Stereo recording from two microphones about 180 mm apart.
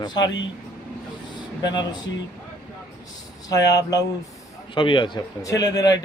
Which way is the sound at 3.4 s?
20° left (ahead or behind).